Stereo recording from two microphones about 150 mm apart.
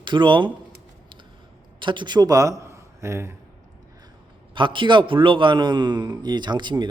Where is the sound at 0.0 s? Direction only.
30° right (ahead or behind).